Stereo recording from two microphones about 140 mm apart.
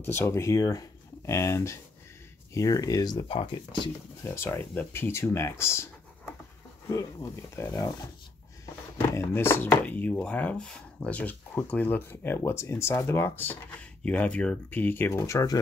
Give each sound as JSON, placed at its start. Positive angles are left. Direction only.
{"t": 0.0, "sound": "speech", "side_deg": 20}
{"t": 4.2, "sound": "speech", "side_deg": 15}
{"t": 6.9, "sound": "speech", "side_deg": 25}
{"t": 9.1, "sound": "speech", "side_deg": 20}